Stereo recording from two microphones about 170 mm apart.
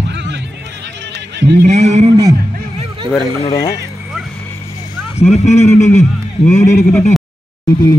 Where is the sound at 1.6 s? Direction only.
40° right (ahead or behind).